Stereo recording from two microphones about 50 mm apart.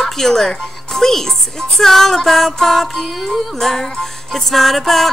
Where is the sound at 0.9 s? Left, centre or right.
Centre.